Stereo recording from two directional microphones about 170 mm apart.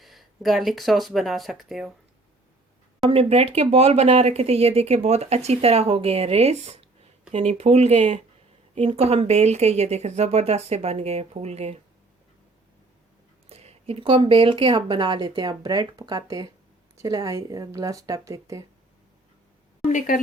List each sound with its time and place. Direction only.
0.0 s speech: centre (ahead or behind)
3.1 s speech: 35° right (ahead or behind)
13.5 s speech: 35° right (ahead or behind); by 18.6 s 20° right (ahead or behind)
19.8 s a woman's voice: 45° left (ahead or behind)